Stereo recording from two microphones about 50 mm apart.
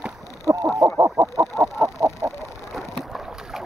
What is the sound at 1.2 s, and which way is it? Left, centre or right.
Fowl, right.